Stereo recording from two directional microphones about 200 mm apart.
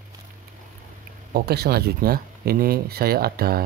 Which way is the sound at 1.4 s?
50° right (ahead or behind).